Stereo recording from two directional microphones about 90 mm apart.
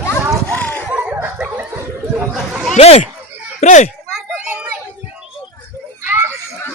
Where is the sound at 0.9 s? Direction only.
20° right (ahead or behind).